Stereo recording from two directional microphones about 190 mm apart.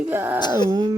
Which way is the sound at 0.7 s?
20° right (ahead or behind).